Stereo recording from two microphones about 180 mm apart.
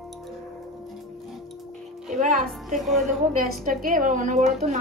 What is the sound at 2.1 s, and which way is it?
Music, 45° right (ahead or behind).